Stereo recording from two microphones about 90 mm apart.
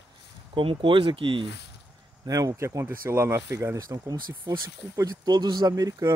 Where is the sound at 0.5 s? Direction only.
75° right (ahead or behind).